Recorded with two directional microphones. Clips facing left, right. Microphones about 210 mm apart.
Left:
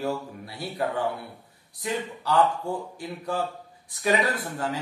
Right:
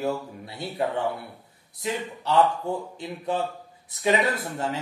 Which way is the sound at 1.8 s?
25° right (ahead or behind).